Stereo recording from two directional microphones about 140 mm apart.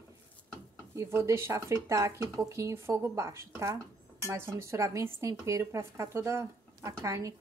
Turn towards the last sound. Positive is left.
turn(degrees=-20)  # may be behind; listen again after turning